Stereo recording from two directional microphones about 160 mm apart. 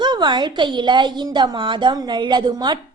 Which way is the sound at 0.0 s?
25° right (ahead or behind).